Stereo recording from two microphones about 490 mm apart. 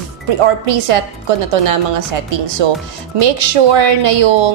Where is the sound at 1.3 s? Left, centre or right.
Right.